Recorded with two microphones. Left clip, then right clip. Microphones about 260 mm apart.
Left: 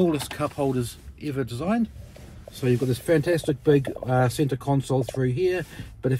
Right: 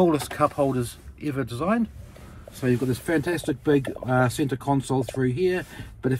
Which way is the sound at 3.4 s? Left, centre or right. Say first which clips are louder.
Left 2 dB; right.